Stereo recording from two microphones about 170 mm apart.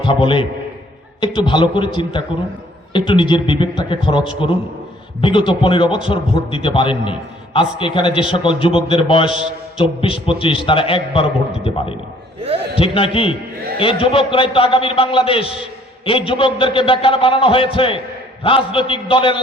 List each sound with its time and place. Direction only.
0.0 s a man's voice: 30° left (ahead or behind)
12.4 s a man's voice: 35° right (ahead or behind)
12.7 s a man's voice: 30° left (ahead or behind)